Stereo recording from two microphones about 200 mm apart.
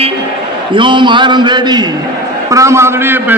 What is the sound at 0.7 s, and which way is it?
A man's voice, 25° right (ahead or behind).